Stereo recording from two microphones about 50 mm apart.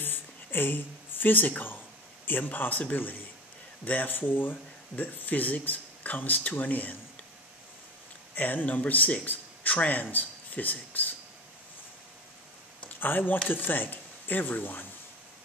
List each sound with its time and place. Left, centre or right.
0.0 s a sound: left
2.2 s speech: left
8.4 s speech: left
13.0 s speech: left